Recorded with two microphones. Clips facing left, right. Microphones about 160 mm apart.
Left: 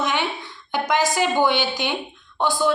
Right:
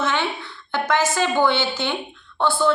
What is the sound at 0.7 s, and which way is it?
A woman's voice, 15° left (ahead or behind).